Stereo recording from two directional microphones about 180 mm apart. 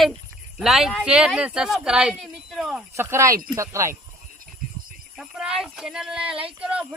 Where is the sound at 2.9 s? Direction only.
15° right (ahead or behind).